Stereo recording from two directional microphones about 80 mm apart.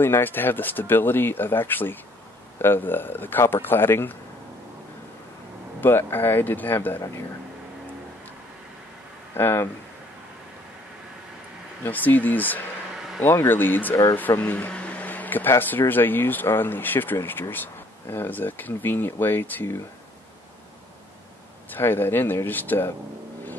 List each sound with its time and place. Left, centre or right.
0.0 s speech: left
5.8 s speech: left
9.3 s speech: left
11.8 s speech: left
14.4 s a sound: left
15.9 s speech: left
21.6 s speech: left